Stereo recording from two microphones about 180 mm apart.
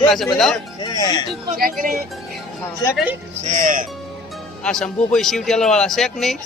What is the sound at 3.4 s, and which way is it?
Speech, 45° right (ahead or behind).